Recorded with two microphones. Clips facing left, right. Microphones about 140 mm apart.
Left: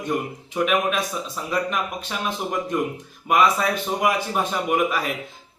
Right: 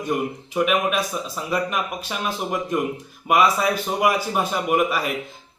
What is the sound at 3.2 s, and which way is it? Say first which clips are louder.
A man's voice: right 1 dB; 5° right (ahead or behind).